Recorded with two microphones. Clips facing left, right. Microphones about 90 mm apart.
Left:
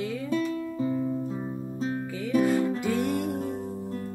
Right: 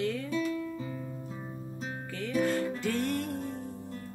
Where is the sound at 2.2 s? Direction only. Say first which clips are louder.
Left 5 dB; 10° left (ahead or behind).